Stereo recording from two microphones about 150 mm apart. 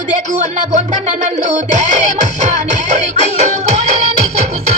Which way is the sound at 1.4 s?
50° right (ahead or behind).